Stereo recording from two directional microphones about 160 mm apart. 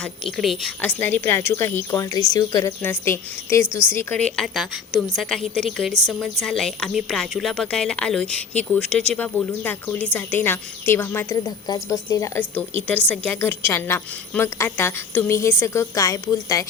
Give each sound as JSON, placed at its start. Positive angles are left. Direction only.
{"t": 0.0, "sound": "a woman's voice", "side_deg": 0}